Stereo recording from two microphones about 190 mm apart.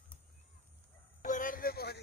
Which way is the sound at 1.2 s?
45° left (ahead or behind).